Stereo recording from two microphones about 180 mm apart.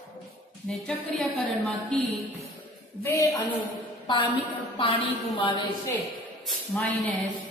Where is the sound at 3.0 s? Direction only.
10° left (ahead or behind).